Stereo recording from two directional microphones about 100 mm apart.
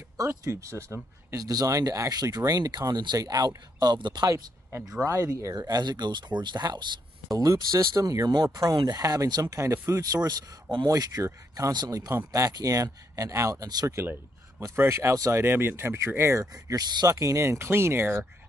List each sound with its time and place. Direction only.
0.2 s speech: 30° right (ahead or behind)
5.0 s speech: 30° right (ahead or behind)
16.6 s speech: 40° right (ahead or behind); by 18.2 s 25° right (ahead or behind)